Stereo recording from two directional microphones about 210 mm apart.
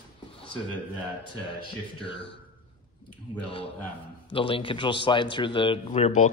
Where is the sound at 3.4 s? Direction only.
25° left (ahead or behind).